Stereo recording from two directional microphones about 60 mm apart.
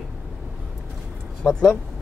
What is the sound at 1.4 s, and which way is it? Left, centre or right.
Speech, centre.